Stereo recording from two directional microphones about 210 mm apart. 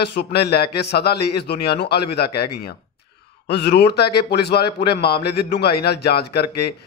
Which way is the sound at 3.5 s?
50° left (ahead or behind).